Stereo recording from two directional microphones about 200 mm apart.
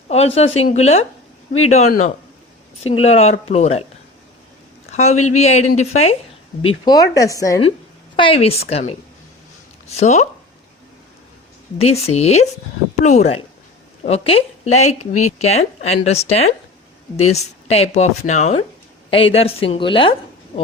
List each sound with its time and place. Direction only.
0.1 s speech: 30° left (ahead or behind)
4.9 s speech: 35° left (ahead or behind)
6.7 s a woman's voice: 20° left (ahead or behind)
11.8 s a woman's voice: 30° left (ahead or behind)